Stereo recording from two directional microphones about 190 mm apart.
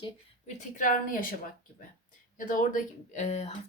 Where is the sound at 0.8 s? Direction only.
45° left (ahead or behind).